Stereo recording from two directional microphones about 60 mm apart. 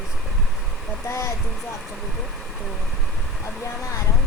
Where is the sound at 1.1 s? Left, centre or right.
Left.